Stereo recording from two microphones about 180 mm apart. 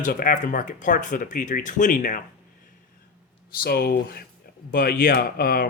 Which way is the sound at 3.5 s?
55° left (ahead or behind).